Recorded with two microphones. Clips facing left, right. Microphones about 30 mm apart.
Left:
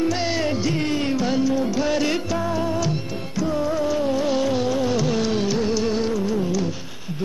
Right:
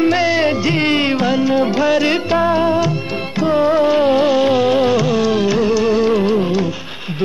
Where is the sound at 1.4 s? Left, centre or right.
Right.